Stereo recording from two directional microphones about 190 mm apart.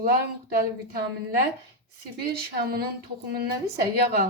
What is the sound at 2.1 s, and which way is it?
Speech, 55° right (ahead or behind).